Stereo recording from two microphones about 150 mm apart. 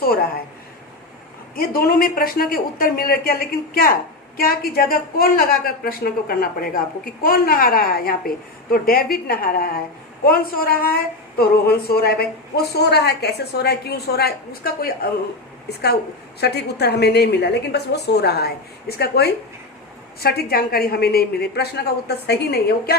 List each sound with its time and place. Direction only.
1.5 s speech: 80° left
4.4 s a woman's voice: 80° left
16.4 s a woman's voice: 90° left